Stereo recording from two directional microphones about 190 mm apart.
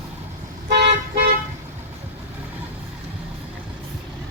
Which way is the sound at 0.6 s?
60° right (ahead or behind).